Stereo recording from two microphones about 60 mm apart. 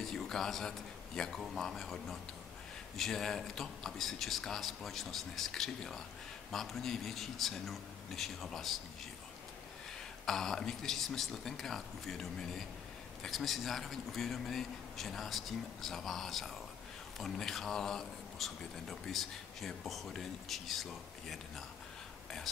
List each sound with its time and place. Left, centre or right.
0.0 s a man's voice: centre
10.2 s speech: centre